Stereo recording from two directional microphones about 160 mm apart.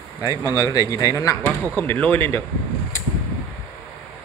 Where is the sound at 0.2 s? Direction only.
25° left (ahead or behind).